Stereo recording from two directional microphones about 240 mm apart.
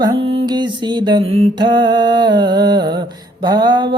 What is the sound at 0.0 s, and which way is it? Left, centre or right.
Mantra, centre.